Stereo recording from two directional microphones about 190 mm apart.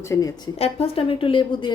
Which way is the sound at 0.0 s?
15° left (ahead or behind).